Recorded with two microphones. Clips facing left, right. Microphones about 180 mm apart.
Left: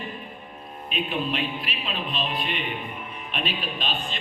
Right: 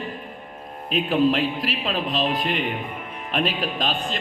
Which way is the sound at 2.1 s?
90° right.